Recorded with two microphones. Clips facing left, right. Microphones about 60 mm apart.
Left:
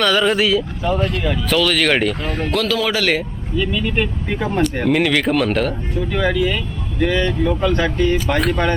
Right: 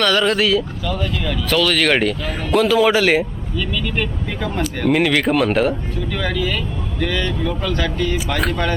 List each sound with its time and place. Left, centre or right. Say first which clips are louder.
0.0 s speech: left 1 dB; centre
2.5 s speech: right 6 dB; centre
3.6 s speech: left 3 dB; centre
4.9 s speech: right 3 dB; centre
6.1 s speech: left 4 dB; centre
8.3 s speech: left 3 dB; centre